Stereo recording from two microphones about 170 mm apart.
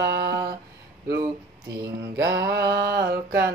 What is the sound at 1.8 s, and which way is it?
Mantra, 70° right (ahead or behind).